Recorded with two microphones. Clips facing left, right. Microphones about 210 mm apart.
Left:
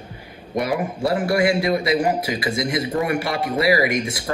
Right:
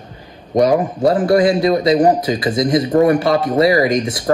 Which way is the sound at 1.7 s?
40° right (ahead or behind).